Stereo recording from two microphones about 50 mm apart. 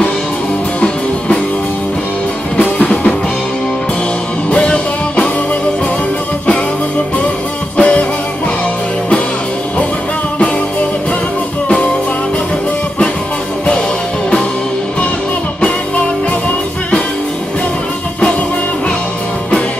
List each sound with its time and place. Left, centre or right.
0.7 s music: centre
2.6 s music: left
4.5 s music: left
7.7 s music: left